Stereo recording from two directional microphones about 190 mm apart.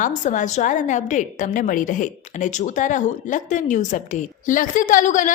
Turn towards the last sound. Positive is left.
turn(degrees=40)  # may be behind; listen again after turning